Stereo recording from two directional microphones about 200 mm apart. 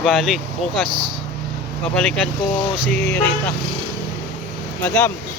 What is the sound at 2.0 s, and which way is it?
Speech, 5° left (ahead or behind).